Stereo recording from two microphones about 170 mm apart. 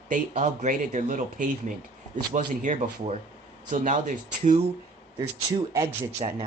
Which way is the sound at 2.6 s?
45° right (ahead or behind).